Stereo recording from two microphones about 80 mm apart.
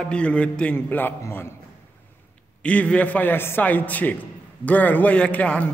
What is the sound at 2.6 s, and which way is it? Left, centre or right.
A man's voice, centre.